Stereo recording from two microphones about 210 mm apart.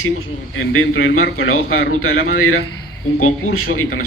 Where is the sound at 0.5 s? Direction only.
70° left (ahead or behind).